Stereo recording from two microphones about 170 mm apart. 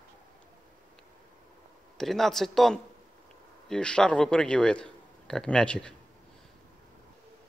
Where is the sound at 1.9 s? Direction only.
Centre (ahead or behind).